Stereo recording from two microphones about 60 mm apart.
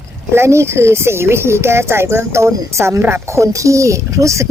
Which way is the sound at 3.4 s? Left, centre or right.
Right.